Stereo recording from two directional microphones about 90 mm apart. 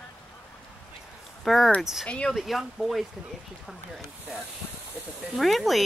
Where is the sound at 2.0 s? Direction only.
10° left (ahead or behind).